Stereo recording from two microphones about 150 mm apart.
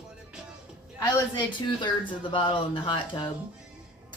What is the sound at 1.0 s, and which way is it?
A woman's voice, 25° left (ahead or behind).